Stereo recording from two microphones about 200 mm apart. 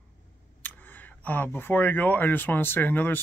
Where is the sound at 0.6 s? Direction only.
10° left (ahead or behind).